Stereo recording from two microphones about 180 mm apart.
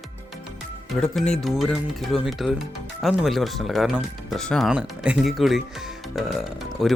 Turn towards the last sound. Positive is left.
turn(degrees=0)  # may be behind; listen again after turning